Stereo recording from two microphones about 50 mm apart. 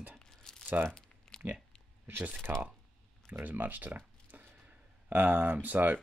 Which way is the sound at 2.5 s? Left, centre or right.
Right.